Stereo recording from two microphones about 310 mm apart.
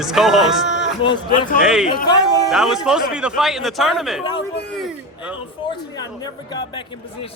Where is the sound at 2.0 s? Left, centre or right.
Centre.